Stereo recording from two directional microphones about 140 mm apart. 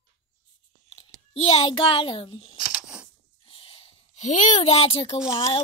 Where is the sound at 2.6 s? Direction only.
5° right (ahead or behind).